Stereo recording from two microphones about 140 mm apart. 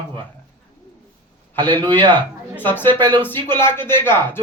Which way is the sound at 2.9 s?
35° right (ahead or behind).